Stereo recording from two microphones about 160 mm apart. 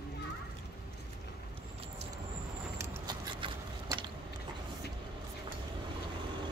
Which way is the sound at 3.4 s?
30° right (ahead or behind).